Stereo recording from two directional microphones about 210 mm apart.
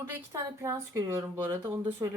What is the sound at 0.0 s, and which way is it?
Speech, 10° right (ahead or behind).